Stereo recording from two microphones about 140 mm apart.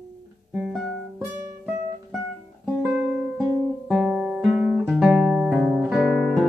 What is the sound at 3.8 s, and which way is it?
Guitar, 5° right (ahead or behind).